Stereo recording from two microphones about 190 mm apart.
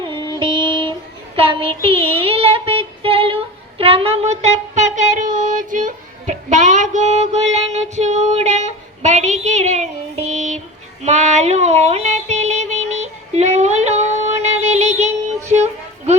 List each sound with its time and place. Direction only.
0.3 s music: 25° right (ahead or behind)
1.4 s child singing: 30° right (ahead or behind)
10.3 s a sound: 40° right (ahead or behind)
11.0 s music: 35° right (ahead or behind)